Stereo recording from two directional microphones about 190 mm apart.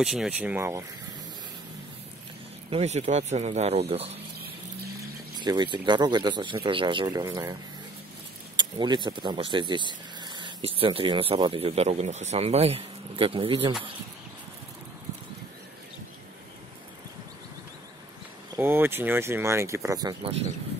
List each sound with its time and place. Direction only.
0.0 s speech: 5° right (ahead or behind)
2.7 s speech: 35° right (ahead or behind)
5.4 s speech: 25° right (ahead or behind)
8.5 s speech: 25° right (ahead or behind)
18.6 s speech: 10° right (ahead or behind)